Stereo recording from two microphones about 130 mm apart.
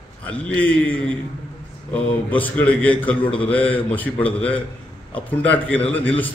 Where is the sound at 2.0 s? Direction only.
10° left (ahead or behind).